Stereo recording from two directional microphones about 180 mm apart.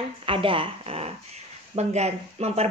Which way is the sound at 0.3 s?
30° right (ahead or behind).